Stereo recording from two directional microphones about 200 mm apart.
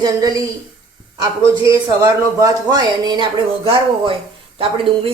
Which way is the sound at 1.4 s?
15° right (ahead or behind).